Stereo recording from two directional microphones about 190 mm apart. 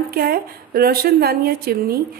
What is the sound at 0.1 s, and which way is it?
A woman's voice, 50° right (ahead or behind).